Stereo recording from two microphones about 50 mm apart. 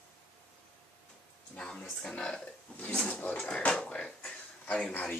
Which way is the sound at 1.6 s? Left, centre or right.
Centre.